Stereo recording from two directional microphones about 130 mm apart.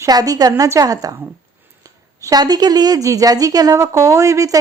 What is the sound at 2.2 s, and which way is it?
A woman's voice, 30° right (ahead or behind).